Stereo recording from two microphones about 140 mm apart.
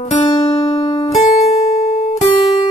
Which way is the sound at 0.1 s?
45° left (ahead or behind).